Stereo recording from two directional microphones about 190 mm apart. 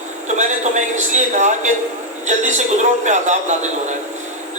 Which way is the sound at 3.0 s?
40° right (ahead or behind).